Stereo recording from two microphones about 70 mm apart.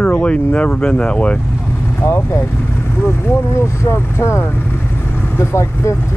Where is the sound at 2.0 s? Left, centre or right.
Left.